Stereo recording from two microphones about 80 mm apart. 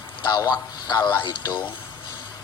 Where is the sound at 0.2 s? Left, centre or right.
Left.